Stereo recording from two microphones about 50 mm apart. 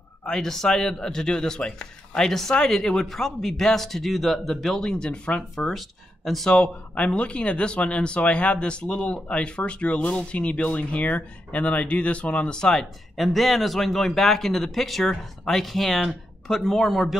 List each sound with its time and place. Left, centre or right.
0.2 s a man's voice: centre
5.7 s speech: centre
6.5 s speech: left
13.1 s speech: centre